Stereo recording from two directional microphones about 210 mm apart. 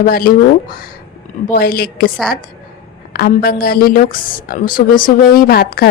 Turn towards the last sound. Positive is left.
turn(degrees=45)  # may be behind; listen again after turning